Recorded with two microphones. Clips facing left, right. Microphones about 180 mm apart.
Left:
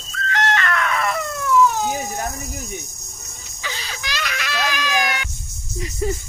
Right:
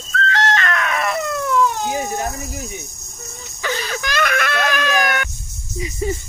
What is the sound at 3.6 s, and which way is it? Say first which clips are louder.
Music: right 8 dB; 55° right (ahead or behind).